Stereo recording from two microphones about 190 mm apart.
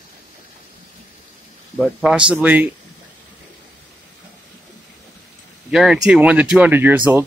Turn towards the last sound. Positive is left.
turn(degrees=-10)  # may be behind; listen again after turning